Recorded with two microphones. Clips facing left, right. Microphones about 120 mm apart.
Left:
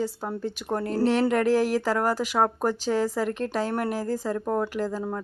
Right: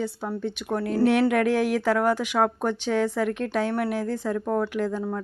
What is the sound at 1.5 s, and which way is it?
Speech, 35° left (ahead or behind).